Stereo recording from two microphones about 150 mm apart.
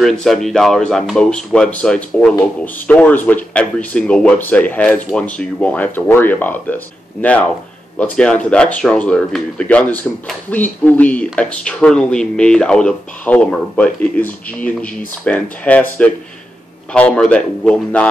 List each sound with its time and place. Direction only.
0.2 s speech: centre (ahead or behind)